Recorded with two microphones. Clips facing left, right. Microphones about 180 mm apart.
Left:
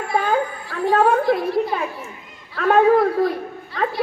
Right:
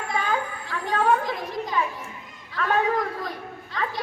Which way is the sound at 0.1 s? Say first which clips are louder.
Left 7 dB; 55° left (ahead or behind).